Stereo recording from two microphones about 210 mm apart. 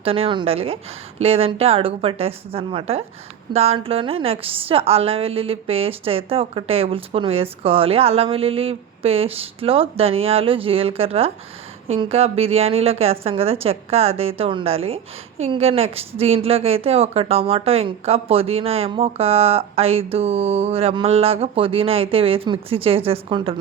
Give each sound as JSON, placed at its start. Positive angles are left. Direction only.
{"t": 0.0, "sound": "a woman's voice", "side_deg": -25}